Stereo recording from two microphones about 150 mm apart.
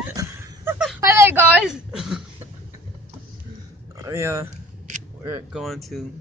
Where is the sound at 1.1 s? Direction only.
15° right (ahead or behind).